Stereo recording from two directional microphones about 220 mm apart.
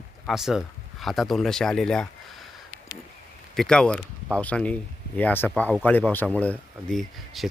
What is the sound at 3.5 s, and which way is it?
Speech, 5° left (ahead or behind).